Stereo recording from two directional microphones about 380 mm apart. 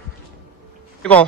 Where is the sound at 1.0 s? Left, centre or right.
Centre.